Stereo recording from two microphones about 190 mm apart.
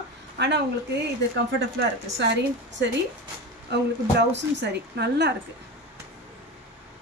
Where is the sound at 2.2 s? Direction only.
70° right (ahead or behind).